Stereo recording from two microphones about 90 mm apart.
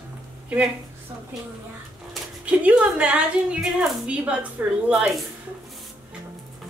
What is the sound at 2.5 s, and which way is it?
A woman's voice, 15° right (ahead or behind).